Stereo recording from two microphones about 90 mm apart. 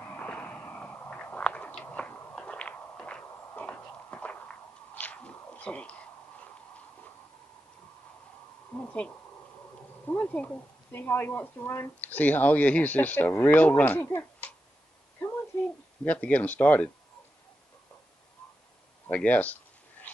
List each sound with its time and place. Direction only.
0.0 s a sound: 15° left (ahead or behind)
8.7 s owl: 15° left (ahead or behind)
10.0 s speech: 20° left (ahead or behind)
16.0 s speech: 15° left (ahead or behind)
19.0 s speech: 15° left (ahead or behind)